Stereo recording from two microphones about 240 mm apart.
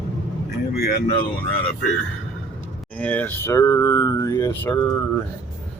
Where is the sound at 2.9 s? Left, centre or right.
Centre.